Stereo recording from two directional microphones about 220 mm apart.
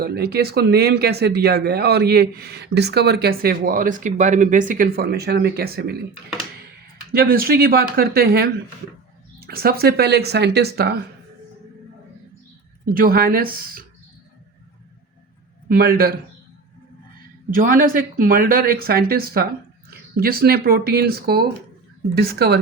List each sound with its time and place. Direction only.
0.0 s speech: 45° right (ahead or behind)
7.1 s speech: 40° right (ahead or behind)
12.8 s speech: 40° right (ahead or behind)
15.7 s speech: 40° right (ahead or behind)
17.5 s speech: 40° right (ahead or behind)